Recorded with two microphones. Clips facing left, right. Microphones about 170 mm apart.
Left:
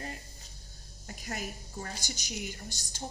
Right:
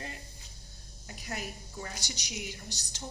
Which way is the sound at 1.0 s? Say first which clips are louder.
Left 1 dB; 50° left (ahead or behind).